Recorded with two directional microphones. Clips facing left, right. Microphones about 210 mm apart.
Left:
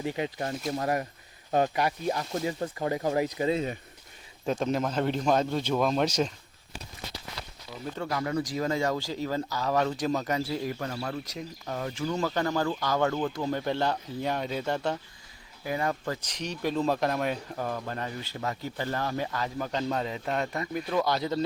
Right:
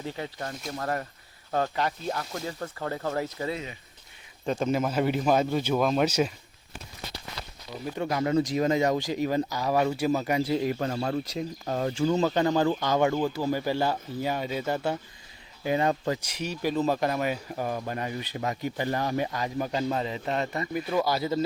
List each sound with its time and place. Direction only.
0.0 s speech: 15° left (ahead or behind)
4.4 s a man's voice: 5° right (ahead or behind)
7.9 s speech: 20° right (ahead or behind)
15.6 s speech: 25° right (ahead or behind)
19.9 s a man's voice: centre (ahead or behind)